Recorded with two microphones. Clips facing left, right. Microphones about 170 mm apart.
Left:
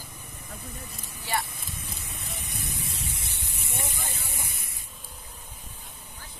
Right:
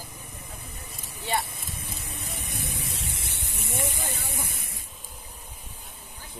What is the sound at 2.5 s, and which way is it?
Vehicle, 60° right (ahead or behind).